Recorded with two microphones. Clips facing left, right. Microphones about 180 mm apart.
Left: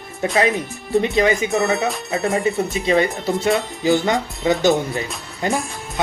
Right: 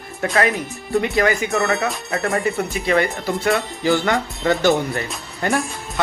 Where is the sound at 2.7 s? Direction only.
20° left (ahead or behind).